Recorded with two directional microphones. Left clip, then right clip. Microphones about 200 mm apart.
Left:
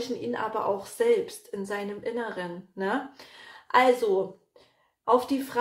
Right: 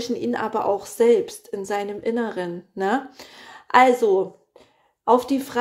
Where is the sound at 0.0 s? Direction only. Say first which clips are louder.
Right 5 dB; 50° right (ahead or behind).